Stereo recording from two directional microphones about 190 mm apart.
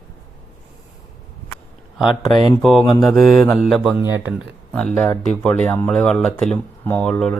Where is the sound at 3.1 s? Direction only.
Centre (ahead or behind).